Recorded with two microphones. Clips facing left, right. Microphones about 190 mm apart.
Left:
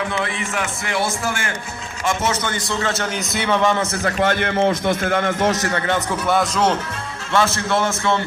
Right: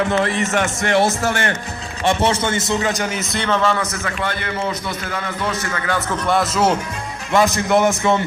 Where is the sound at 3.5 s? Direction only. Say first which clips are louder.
Left 1 dB; 15° left (ahead or behind); by 5.9 s 35° left (ahead or behind).